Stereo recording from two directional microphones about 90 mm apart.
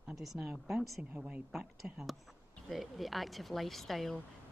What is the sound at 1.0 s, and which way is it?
Speech, 15° right (ahead or behind).